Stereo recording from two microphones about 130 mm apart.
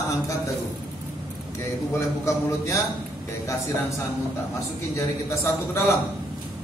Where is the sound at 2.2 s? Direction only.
20° left (ahead or behind).